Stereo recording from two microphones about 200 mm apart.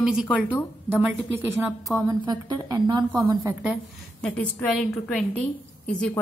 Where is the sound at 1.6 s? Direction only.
10° right (ahead or behind).